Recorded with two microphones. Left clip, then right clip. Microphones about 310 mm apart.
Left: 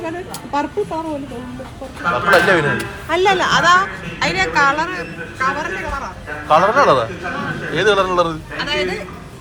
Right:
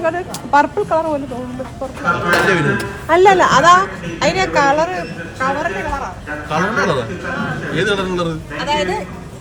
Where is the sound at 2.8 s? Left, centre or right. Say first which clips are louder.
Right 5 dB; right.